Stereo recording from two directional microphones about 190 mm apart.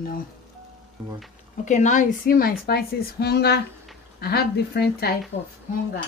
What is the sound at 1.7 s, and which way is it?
A woman's voice, 40° left (ahead or behind).